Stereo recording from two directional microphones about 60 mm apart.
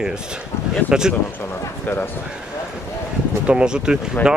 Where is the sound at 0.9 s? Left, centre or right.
Centre.